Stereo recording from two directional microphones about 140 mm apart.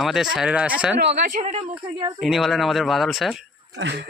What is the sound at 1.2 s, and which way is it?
Speech, 70° right (ahead or behind).